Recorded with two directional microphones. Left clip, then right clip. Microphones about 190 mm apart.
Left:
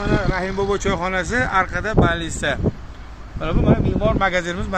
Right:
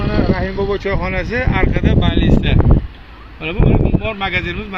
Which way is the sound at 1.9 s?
35° left (ahead or behind).